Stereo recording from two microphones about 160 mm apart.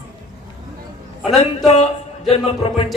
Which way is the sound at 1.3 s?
40° left (ahead or behind).